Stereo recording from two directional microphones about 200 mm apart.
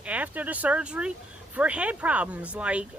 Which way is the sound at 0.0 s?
5° right (ahead or behind).